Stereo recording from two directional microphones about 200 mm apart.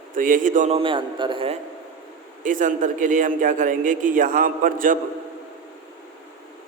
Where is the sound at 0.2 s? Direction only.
40° right (ahead or behind); by 1.5 s 25° right (ahead or behind).